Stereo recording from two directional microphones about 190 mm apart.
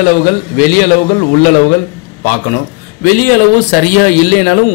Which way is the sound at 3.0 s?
45° left (ahead or behind).